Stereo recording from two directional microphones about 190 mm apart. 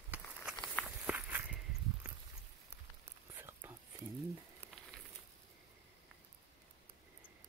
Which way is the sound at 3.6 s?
10° right (ahead or behind).